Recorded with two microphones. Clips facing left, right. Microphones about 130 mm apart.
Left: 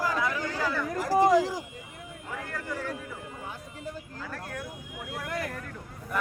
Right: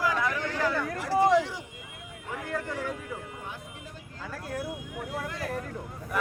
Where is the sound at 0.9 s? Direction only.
40° left (ahead or behind).